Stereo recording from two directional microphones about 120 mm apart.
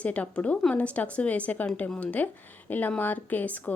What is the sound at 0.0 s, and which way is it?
Speech, 10° left (ahead or behind).